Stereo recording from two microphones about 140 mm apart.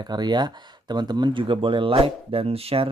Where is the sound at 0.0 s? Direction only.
30° right (ahead or behind).